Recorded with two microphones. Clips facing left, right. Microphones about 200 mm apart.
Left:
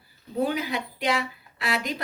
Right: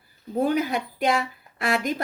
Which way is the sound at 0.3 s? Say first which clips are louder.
Right 3 dB; 50° right (ahead or behind).